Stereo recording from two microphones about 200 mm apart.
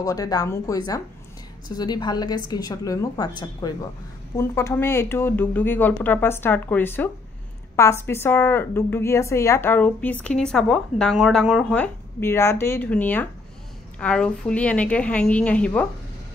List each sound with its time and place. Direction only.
0.0 s a woman's voice: 15° left (ahead or behind)